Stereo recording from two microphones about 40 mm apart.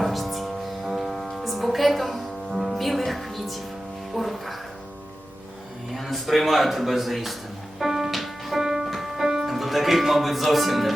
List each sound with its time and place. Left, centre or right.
0.0 s music: centre
5.9 s a man's voice: centre
7.8 s music: centre
8.6 s music: centre
8.9 s music: centre
9.5 s speech: centre